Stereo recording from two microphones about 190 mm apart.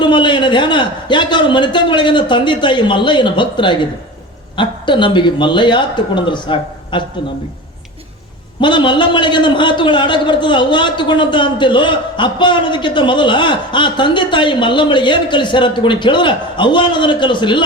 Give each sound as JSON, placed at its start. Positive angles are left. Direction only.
{"t": 0.0, "sound": "a man's voice", "side_deg": 25}
{"t": 8.6, "sound": "a man's voice", "side_deg": 25}